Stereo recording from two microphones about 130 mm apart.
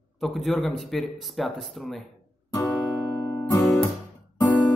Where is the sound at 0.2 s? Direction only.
Centre (ahead or behind).